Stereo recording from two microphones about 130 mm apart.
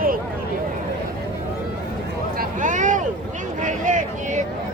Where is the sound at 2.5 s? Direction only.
80° right.